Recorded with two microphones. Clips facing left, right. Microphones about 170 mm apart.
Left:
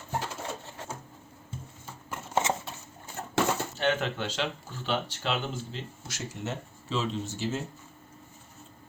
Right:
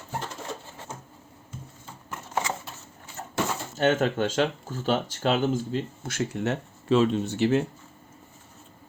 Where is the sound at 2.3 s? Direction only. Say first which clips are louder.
Left 2 dB; 25° left (ahead or behind).